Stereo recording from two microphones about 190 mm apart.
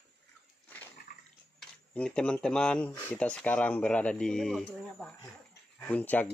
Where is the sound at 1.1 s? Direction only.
50° left (ahead or behind).